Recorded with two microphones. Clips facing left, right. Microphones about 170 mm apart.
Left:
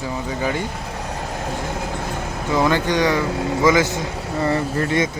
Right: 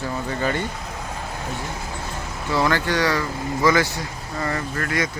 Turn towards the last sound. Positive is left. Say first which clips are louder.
# left 5 dB
turn(degrees=25)  # may be behind; listen again after turning